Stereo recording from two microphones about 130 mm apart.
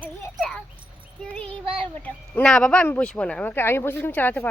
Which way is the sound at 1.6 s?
45° right (ahead or behind).